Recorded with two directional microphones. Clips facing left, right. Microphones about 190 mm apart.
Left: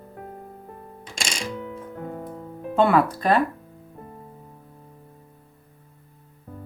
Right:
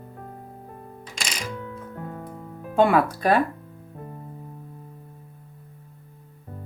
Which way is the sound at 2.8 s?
10° right (ahead or behind).